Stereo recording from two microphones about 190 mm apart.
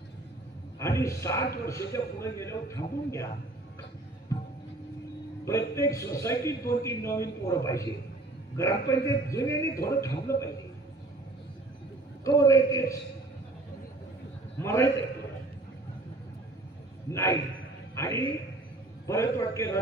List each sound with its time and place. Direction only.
0.7 s a man's voice: 15° left (ahead or behind)
4.3 s music: 15° left (ahead or behind)
5.4 s a man's voice: 15° left (ahead or behind)
12.3 s a man's voice: 15° left (ahead or behind)
14.6 s a sound: 15° left (ahead or behind)
17.1 s a man's voice: 15° left (ahead or behind)